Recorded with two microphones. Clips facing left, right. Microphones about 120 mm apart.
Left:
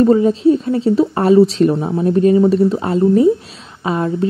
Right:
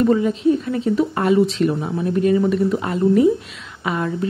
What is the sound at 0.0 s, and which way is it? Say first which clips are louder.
Speech: left 5 dB; 30° left (ahead or behind).